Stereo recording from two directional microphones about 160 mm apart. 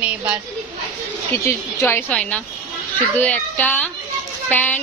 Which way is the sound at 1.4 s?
15° left (ahead or behind).